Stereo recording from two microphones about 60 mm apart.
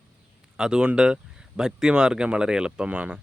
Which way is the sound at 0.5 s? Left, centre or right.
Centre.